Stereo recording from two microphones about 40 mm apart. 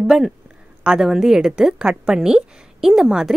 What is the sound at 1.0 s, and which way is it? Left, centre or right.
A woman's voice, centre.